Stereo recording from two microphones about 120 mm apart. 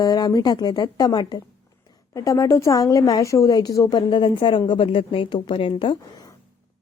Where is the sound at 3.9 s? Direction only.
40° left (ahead or behind).